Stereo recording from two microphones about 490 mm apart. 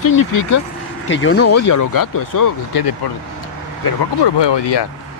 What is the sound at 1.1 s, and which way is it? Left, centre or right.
Speech, left.